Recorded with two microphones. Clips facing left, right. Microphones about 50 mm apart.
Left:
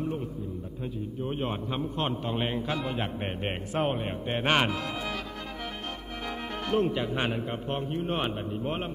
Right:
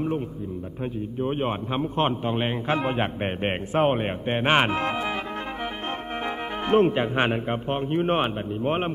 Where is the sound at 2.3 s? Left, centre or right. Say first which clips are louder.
Right 4 dB; right.